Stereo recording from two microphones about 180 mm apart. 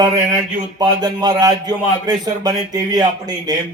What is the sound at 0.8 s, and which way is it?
A man's voice, 20° right (ahead or behind).